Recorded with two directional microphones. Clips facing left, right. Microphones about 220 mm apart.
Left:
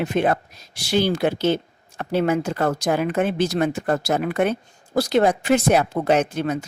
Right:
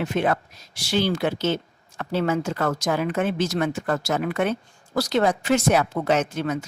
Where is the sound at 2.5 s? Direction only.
30° left (ahead or behind).